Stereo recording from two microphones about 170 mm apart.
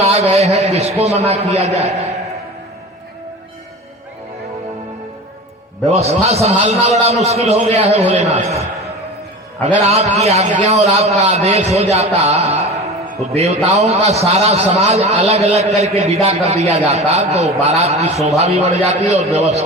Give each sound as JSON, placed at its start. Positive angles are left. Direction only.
{"t": 0.0, "sound": "a man's voice", "side_deg": -40}
{"t": 5.8, "sound": "a man's voice", "side_deg": -40}
{"t": 9.8, "sound": "a man's voice", "side_deg": -40}